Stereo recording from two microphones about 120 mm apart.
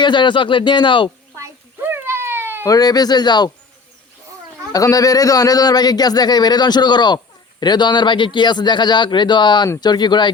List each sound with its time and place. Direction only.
0.0 s a man's voice: 40° left (ahead or behind)
1.4 s a sound: 20° right (ahead or behind)
2.6 s a man's voice: 35° left (ahead or behind)
4.7 s a man's voice: 30° left (ahead or behind)